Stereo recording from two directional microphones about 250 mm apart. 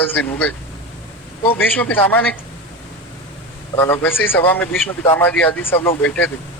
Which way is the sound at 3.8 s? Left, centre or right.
Centre.